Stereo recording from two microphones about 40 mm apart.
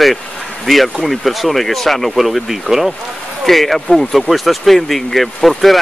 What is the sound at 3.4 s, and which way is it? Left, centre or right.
Speech, centre.